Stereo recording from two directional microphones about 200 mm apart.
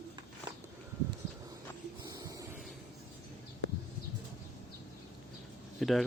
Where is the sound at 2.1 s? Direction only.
15° right (ahead or behind).